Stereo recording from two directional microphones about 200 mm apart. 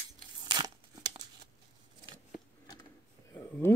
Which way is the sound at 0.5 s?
20° right (ahead or behind).